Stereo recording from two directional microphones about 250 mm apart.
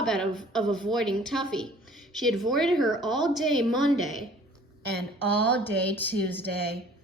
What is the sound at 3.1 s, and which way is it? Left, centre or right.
Speech, centre.